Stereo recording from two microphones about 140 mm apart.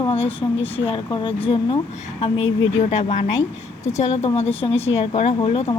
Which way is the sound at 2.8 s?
55° left (ahead or behind).